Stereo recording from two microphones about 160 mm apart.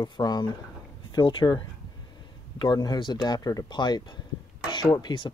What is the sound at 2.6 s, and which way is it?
Speech, 25° left (ahead or behind).